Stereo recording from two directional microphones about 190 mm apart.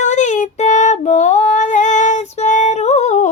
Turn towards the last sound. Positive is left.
turn(degrees=35)  # may be behind; listen again after turning